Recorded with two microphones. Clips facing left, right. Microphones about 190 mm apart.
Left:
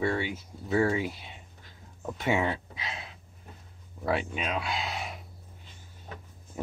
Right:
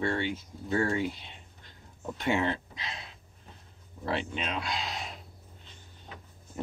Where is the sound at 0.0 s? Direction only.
10° left (ahead or behind).